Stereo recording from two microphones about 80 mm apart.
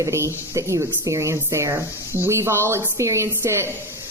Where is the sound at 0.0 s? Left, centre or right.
Right.